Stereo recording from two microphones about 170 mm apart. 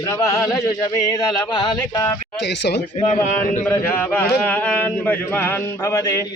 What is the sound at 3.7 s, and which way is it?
A man's voice, 10° left (ahead or behind).